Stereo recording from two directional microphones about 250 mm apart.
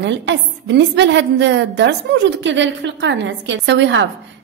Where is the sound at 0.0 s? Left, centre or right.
Right.